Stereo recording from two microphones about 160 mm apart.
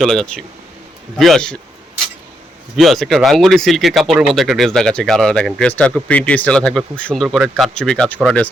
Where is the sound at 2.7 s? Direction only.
Centre (ahead or behind).